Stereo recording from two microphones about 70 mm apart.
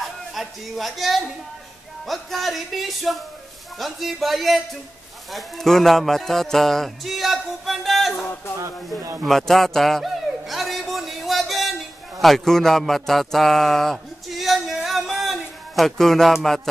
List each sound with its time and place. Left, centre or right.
0.0 s speech: centre
9.2 s dog: centre
12.2 s a sound: centre